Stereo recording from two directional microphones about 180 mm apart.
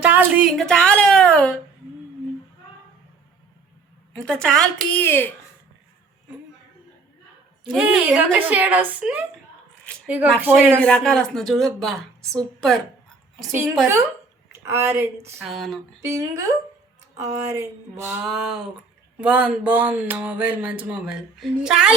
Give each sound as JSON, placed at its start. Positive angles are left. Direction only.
{"t": 0.0, "sound": "a woman's voice", "side_deg": -10}
{"t": 4.2, "sound": "a woman's voice", "side_deg": 5}
{"t": 7.6, "sound": "speech", "side_deg": -5}
{"t": 10.4, "sound": "speech", "side_deg": -10}
{"t": 10.8, "sound": "a woman's voice", "side_deg": 5}
{"t": 14.5, "sound": "speech", "side_deg": -15}
{"t": 15.4, "sound": "a woman's voice", "side_deg": 0}
{"t": 16.0, "sound": "a woman's voice", "side_deg": -15}